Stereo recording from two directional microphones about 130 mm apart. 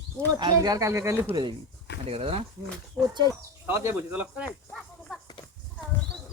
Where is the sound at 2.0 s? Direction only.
50° right (ahead or behind).